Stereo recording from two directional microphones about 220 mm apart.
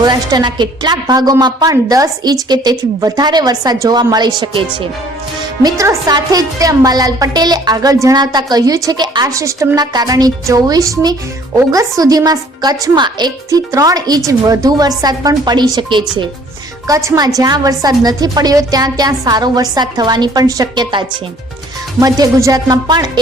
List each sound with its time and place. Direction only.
0.0 s a woman's voice: 20° right (ahead or behind)
22.0 s a woman's voice: 15° right (ahead or behind)